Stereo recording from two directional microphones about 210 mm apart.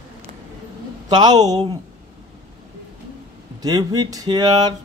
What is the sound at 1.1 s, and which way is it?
Speech, 20° right (ahead or behind).